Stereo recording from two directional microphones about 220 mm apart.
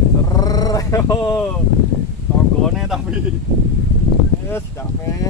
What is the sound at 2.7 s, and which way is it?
Speech, centre (ahead or behind).